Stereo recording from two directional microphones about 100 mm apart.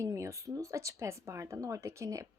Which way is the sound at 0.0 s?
30° right (ahead or behind).